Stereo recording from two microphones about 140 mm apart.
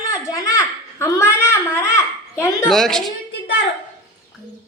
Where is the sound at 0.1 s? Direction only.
25° left (ahead or behind).